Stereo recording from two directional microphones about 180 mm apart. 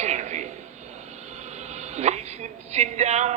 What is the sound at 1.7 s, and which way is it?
A woman's voice, 40° right (ahead or behind).